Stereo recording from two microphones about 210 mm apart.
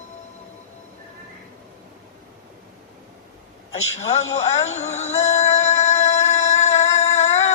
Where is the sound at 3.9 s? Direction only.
30° left (ahead or behind).